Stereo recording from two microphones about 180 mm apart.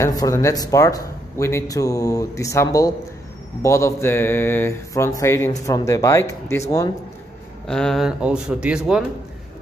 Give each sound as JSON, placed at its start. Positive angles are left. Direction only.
{"t": 0.0, "sound": "speech", "side_deg": 20}
{"t": 7.6, "sound": "speech", "side_deg": 5}